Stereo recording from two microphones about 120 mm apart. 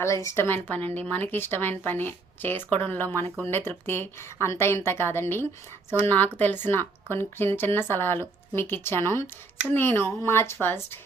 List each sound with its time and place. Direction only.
0.0 s a woman's voice: 25° left (ahead or behind)